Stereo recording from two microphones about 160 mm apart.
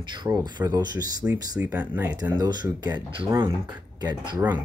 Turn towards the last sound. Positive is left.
turn(degrees=-25)  # may be behind; listen again after turning